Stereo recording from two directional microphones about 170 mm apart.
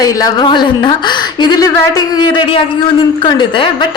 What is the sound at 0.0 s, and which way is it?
A woman's voice, 20° left (ahead or behind).